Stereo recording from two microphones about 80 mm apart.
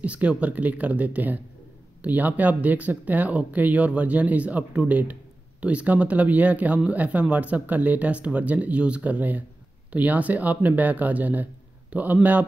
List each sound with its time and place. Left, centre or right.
0.0 s speech: centre